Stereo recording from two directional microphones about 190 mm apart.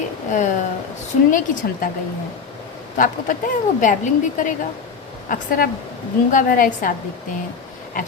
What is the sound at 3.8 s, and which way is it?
A woman's voice, 40° left (ahead or behind).